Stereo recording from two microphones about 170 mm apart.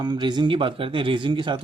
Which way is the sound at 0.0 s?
25° right (ahead or behind).